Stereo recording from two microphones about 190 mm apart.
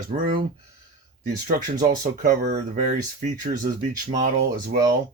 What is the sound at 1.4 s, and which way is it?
Speech, 40° right (ahead or behind).